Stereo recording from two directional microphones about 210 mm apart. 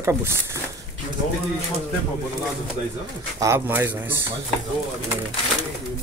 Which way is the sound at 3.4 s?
10° right (ahead or behind).